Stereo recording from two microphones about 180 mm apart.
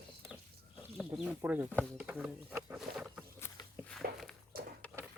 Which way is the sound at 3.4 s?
5° left (ahead or behind).